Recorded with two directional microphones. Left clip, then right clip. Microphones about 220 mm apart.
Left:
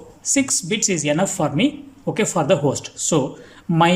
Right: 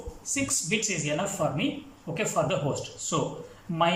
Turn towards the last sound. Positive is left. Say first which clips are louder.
# left 8 dB
turn(degrees=50)  # may be behind; listen again after turning